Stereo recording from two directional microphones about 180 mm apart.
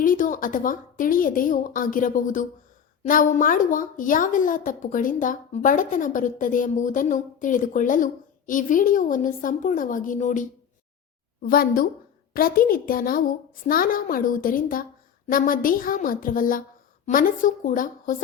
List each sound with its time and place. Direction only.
0.0 s a woman's voice: 45° left (ahead or behind)
11.4 s a woman's voice: 55° left (ahead or behind)